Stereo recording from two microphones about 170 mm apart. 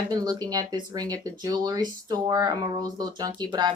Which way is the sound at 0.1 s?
25° right (ahead or behind).